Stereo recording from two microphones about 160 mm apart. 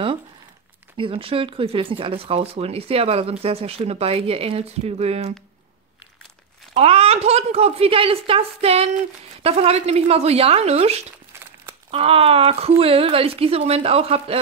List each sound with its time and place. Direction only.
0.9 s speech: 35° right (ahead or behind)
6.7 s speech: 40° right (ahead or behind)